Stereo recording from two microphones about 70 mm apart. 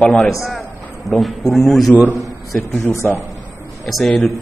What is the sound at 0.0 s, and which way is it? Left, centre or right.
Speech, centre.